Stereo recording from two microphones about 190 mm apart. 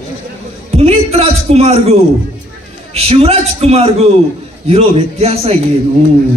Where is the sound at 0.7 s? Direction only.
35° right (ahead or behind).